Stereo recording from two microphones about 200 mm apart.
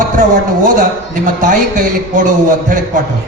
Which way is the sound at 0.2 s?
40° right (ahead or behind).